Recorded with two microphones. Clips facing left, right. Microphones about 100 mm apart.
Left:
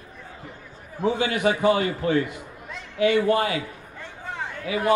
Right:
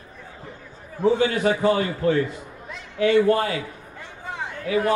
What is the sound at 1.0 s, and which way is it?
Speech, 10° left (ahead or behind).